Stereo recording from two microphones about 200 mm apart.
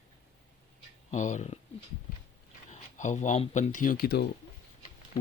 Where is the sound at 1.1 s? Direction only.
35° left (ahead or behind).